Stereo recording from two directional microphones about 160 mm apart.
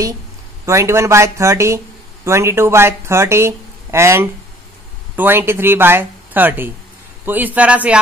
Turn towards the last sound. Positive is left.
turn(degrees=-10)  # may be behind; listen again after turning